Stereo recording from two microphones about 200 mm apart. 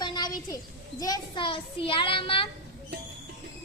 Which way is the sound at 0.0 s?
20° left (ahead or behind).